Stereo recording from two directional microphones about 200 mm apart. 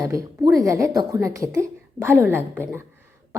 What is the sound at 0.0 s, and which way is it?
A woman's voice, 15° right (ahead or behind).